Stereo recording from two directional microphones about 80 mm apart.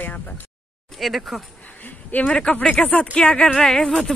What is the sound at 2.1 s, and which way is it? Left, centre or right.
Speech, left.